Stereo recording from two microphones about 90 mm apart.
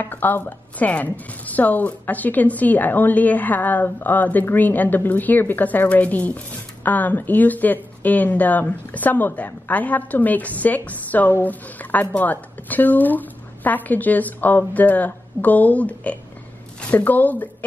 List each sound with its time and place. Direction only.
0.0 s a woman's voice: 20° left (ahead or behind)